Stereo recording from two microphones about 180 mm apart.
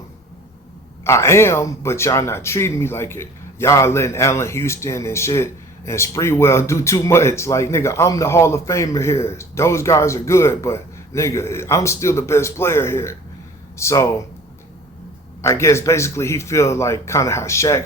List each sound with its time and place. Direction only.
1.0 s speech: 15° left (ahead or behind)
15.4 s speech: 15° left (ahead or behind)